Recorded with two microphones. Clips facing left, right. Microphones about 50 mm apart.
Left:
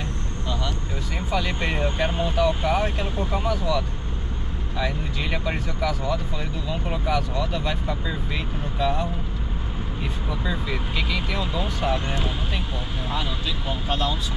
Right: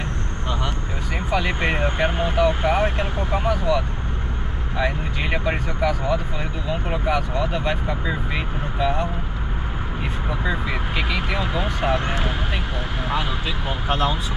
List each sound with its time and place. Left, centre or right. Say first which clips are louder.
1.3 s speech: right 3 dB; right
10.4 s speech: right 3 dB; right
13.7 s speech: right 4 dB; right